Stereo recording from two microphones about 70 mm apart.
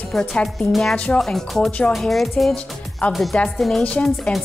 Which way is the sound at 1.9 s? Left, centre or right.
Centre.